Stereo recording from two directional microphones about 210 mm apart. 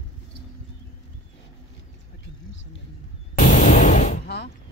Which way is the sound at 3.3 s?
35° left (ahead or behind).